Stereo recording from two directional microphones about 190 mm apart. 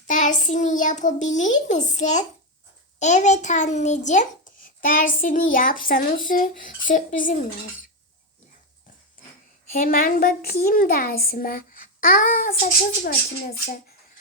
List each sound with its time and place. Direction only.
0.1 s a child's voice: 40° left (ahead or behind)
9.7 s a child's voice: 50° left (ahead or behind)